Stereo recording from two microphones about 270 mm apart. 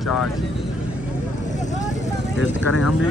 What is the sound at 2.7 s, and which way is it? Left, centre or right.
Speech, left.